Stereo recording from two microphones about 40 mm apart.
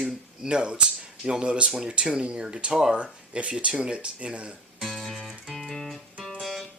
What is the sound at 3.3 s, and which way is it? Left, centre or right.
Speech, right.